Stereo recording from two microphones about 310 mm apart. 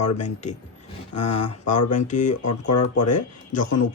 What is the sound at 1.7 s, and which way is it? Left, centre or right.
Speech, left.